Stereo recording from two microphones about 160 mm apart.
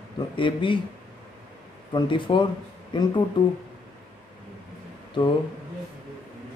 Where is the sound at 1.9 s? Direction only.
30° left (ahead or behind).